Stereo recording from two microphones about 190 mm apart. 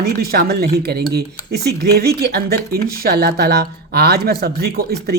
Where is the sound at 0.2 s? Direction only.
55° right (ahead or behind).